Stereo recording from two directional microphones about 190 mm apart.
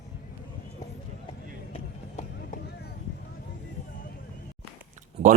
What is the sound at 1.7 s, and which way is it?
Run, 35° left (ahead or behind).